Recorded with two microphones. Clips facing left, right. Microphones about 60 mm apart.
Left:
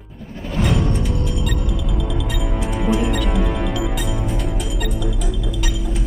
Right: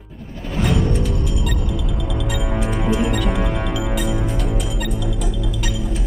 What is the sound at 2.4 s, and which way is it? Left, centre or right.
Music, right.